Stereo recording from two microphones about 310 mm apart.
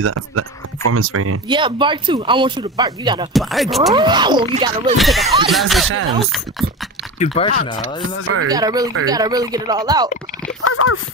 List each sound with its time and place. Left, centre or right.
0.0 s speech: right
1.5 s speech: centre
3.3 s speech: centre
3.9 s speech: centre
4.9 s speech: centre
7.3 s speech: centre
7.8 s speech: right
8.5 s speech: centre
10.6 s speech: left